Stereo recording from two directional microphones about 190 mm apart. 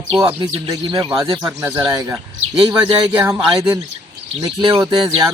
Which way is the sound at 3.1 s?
10° right (ahead or behind).